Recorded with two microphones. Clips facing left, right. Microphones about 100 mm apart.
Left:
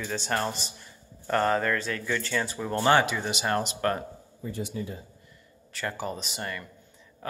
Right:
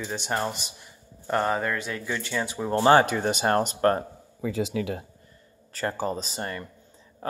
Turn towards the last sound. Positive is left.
turn(degrees=-30)  # may be behind; listen again after turning